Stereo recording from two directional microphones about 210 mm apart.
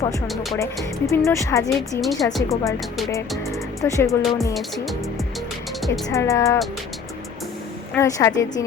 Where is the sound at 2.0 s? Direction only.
Centre (ahead or behind).